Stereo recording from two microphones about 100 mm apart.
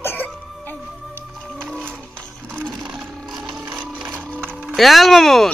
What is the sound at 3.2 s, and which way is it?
Music, 5° right (ahead or behind).